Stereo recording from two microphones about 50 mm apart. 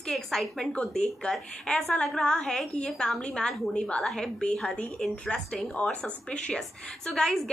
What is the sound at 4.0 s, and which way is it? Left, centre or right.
Speech, centre.